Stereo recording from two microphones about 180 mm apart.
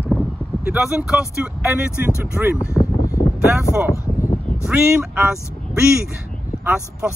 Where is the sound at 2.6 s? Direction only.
15° left (ahead or behind).